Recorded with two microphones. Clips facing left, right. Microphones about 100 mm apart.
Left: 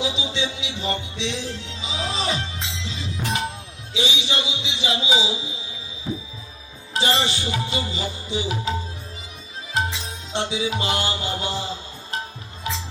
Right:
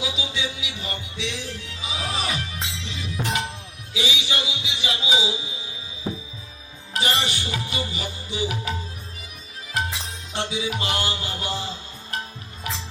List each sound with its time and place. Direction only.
0.0 s music: 25° left (ahead or behind)
6.9 s music: 25° left (ahead or behind)
9.7 s music: 25° left (ahead or behind)